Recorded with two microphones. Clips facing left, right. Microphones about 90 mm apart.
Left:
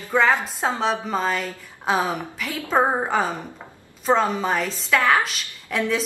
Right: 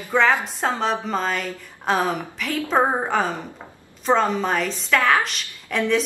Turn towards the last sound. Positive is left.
turn(degrees=0)  # may be behind; listen again after turning